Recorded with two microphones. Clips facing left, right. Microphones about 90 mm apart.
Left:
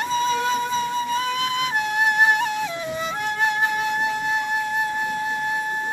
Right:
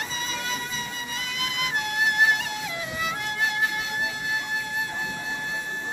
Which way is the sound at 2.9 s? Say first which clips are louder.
Left 3 dB; 25° left (ahead or behind).